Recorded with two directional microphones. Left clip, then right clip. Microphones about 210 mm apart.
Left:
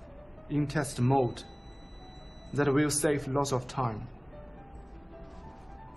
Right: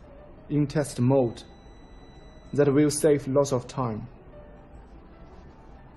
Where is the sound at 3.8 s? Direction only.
50° left (ahead or behind).